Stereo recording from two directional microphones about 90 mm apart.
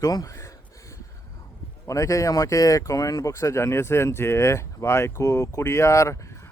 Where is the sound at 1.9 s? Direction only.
35° left (ahead or behind).